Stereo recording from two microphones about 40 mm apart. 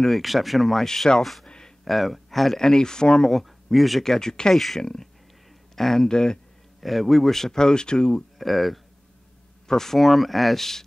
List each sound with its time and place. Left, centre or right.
0.0 s speech: centre
0.8 s speech: centre
1.4 s a sound: centre
1.9 s speech: centre
2.6 s speech: centre
3.3 s speech: centre
4.1 s speech: centre
4.6 s speech: centre
6.0 s speech: centre
6.8 s speech: centre
8.4 s speech: centre